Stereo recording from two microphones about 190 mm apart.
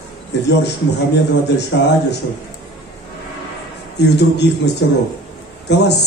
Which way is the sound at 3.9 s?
60° left (ahead or behind).